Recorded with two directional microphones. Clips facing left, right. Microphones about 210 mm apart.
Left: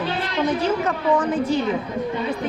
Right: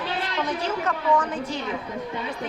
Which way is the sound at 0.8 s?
20° left (ahead or behind).